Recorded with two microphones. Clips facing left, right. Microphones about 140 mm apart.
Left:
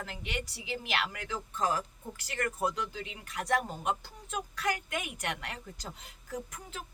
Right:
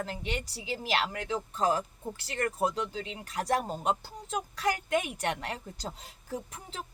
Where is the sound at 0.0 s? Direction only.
30° right (ahead or behind).